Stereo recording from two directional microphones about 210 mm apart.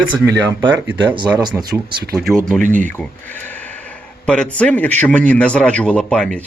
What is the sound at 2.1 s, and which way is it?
Speech, centre (ahead or behind).